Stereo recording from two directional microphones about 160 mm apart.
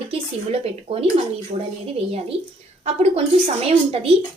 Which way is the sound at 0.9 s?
35° right (ahead or behind).